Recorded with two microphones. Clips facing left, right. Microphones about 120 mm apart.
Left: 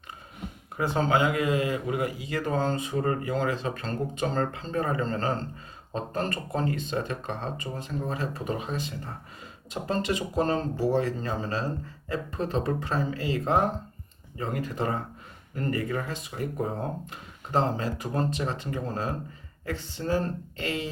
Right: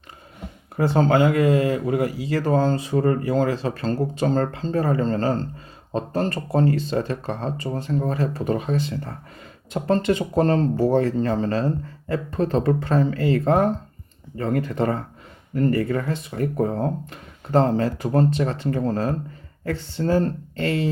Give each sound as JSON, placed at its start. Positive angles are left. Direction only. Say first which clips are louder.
{"t": 0.8, "sound": "speech", "louder": "right 6 dB", "side_deg": -40}
{"t": 8.6, "sound": "speech", "louder": "right 8 dB", "side_deg": -65}
{"t": 9.7, "sound": "speech", "louder": "right 8 dB", "side_deg": -45}
{"t": 15.5, "sound": "speech", "louder": "right 8 dB", "side_deg": -40}
{"t": 20.0, "sound": "speech", "louder": "right 7 dB", "side_deg": -45}